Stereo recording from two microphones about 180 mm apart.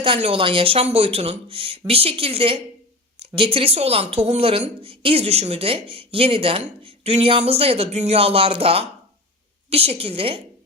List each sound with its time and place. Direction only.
0.0 s speech: 30° right (ahead or behind)